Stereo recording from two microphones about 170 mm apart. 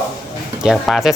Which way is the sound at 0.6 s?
Centre (ahead or behind).